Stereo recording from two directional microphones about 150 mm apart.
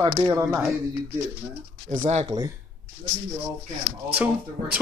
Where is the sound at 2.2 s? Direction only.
25° right (ahead or behind).